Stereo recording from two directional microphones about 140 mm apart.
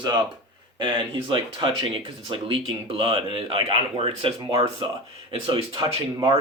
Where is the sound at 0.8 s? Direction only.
35° right (ahead or behind).